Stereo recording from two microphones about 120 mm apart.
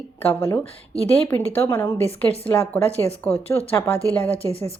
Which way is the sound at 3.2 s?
15° left (ahead or behind).